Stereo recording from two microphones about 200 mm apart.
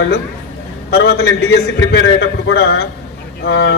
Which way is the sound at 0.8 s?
55° left (ahead or behind).